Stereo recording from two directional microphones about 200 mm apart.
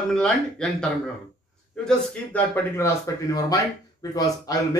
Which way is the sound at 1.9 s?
10° left (ahead or behind).